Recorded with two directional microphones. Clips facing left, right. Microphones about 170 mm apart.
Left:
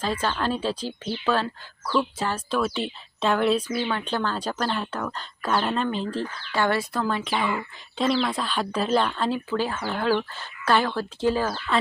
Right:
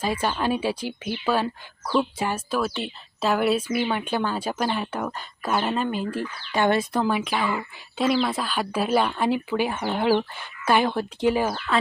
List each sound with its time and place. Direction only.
0.0 s speech: 10° right (ahead or behind)
6.5 s speech: 20° right (ahead or behind)
7.3 s speech: centre (ahead or behind); by 11.5 s 15° right (ahead or behind)
11.5 s speech: 5° right (ahead or behind)